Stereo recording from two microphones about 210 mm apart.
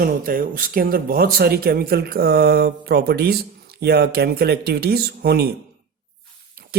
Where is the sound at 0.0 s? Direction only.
45° right (ahead or behind).